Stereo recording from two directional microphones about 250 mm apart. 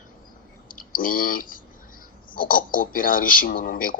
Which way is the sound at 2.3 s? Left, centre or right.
Left.